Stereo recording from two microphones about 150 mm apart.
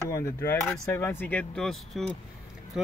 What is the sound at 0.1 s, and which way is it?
Speech, 20° left (ahead or behind).